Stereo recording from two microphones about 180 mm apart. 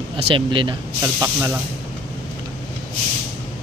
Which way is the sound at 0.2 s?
30° right (ahead or behind).